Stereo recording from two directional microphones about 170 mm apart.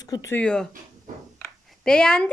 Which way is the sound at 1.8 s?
5° left (ahead or behind).